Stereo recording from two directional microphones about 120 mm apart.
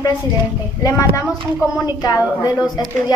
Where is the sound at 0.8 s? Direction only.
25° left (ahead or behind).